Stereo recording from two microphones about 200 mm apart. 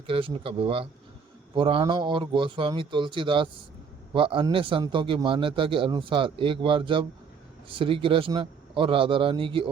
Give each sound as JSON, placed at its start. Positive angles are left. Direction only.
{"t": 0.1, "sound": "a man's voice", "side_deg": -25}